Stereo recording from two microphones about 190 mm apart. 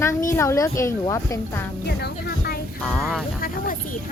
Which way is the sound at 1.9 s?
60° left (ahead or behind).